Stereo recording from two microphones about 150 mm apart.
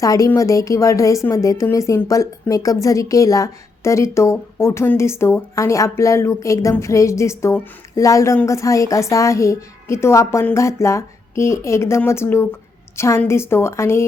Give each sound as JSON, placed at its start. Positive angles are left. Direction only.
{"t": 0.0, "sound": "a woman's voice", "side_deg": 20}